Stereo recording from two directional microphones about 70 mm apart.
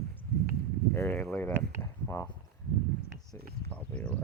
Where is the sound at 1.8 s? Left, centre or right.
Left.